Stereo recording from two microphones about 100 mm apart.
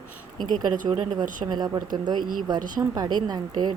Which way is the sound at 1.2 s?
45° right (ahead or behind).